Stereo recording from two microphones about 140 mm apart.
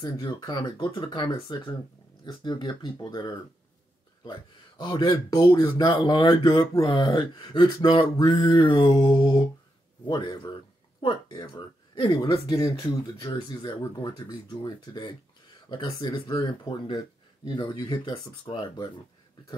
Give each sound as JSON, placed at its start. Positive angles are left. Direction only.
{"t": 0.0, "sound": "speech", "side_deg": 30}
{"t": 6.8, "sound": "speech", "side_deg": 40}